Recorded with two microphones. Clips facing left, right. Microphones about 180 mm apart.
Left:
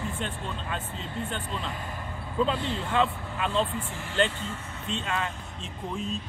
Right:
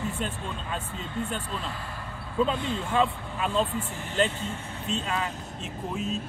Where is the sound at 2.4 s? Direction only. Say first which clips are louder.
Right 1 dB; 5° right (ahead or behind).